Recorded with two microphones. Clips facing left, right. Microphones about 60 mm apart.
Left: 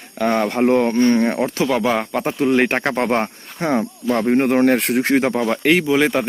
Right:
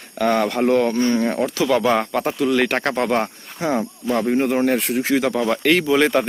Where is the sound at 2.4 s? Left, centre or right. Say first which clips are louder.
Left 3 dB; left.